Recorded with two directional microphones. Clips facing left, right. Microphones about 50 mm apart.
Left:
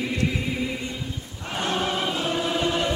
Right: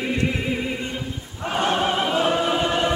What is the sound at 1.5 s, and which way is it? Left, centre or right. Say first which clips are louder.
Choir: right 5 dB; right.